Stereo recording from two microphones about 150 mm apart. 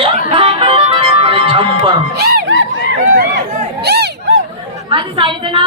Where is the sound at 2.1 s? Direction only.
90° right.